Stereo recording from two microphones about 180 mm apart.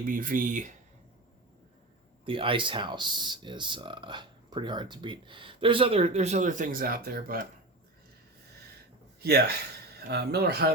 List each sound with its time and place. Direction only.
0.0 s speech: 50° right (ahead or behind)
2.2 s speech: 30° right (ahead or behind); by 7.4 s 55° right (ahead or behind)
9.2 s speech: 65° right (ahead or behind)